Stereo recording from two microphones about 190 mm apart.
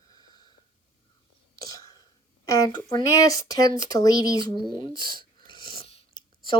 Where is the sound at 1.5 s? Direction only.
20° left (ahead or behind).